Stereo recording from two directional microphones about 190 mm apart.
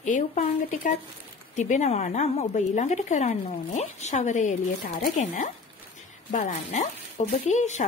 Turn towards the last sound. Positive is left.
turn(degrees=40)  # may be behind; listen again after turning